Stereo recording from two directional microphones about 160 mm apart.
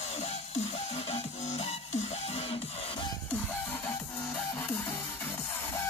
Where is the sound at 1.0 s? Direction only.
40° left (ahead or behind).